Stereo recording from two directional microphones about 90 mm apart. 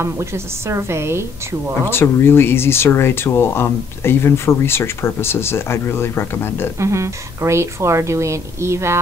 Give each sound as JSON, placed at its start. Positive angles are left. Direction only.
{"t": 0.0, "sound": "a woman's voice", "side_deg": -30}
{"t": 1.9, "sound": "speech", "side_deg": 25}
{"t": 6.8, "sound": "a woman's voice", "side_deg": -35}